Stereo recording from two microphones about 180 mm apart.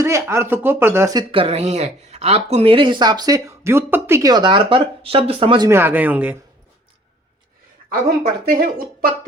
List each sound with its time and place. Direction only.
0.0 s speech: 15° right (ahead or behind)
1.3 s speech: 30° right (ahead or behind)
5.6 s speech: 10° right (ahead or behind)
8.4 s speech: 55° right (ahead or behind)